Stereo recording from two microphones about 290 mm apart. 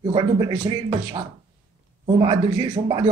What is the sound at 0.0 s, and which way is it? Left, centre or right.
Speech, centre.